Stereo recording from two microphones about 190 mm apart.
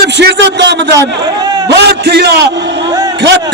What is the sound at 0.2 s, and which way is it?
A man's voice, 65° right (ahead or behind).